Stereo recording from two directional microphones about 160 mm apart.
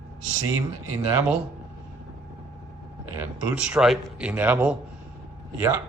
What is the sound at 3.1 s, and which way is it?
A man's voice, 5° right (ahead or behind).